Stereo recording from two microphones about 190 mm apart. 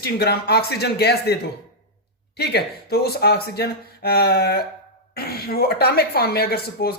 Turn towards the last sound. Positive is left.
turn(degrees=55)  # may be behind; listen again after turning